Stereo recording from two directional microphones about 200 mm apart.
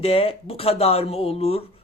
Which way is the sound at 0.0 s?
30° left (ahead or behind).